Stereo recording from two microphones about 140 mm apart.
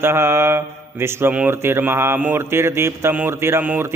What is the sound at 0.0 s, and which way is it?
Speech, 15° right (ahead or behind).